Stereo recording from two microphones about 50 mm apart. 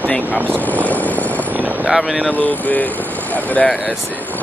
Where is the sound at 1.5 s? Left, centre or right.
Right.